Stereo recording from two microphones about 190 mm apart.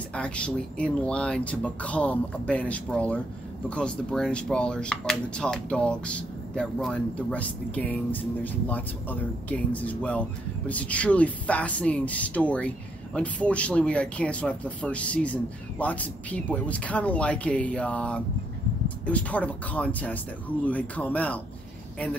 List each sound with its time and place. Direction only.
0.1 s speech: 5° left (ahead or behind)